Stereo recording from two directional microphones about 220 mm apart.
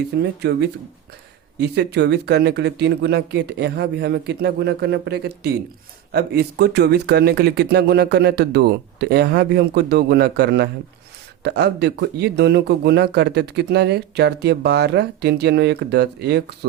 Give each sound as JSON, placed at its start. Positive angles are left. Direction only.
{"t": 0.1, "sound": "a man's voice", "side_deg": -45}
{"t": 1.5, "sound": "a man's voice", "side_deg": -50}